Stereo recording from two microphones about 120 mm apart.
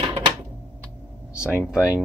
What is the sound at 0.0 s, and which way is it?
Typewriter, 45° right (ahead or behind).